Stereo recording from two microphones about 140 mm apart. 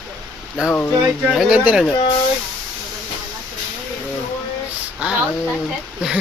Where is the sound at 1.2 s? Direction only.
5° right (ahead or behind).